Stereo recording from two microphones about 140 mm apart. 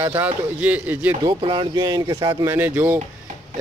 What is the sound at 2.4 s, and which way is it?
Speech, 15° right (ahead or behind).